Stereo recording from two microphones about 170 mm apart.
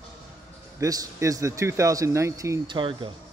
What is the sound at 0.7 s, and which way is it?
Speech, 20° right (ahead or behind).